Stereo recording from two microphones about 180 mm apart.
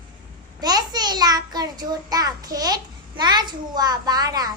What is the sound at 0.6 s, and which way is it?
A child's voice, 20° right (ahead or behind).